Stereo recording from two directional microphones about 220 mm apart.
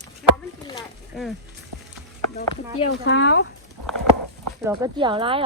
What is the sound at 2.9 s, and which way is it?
Speech, 50° left (ahead or behind).